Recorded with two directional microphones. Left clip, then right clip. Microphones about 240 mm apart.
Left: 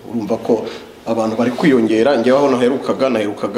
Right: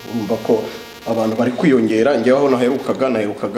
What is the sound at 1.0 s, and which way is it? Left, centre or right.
A man's voice, centre.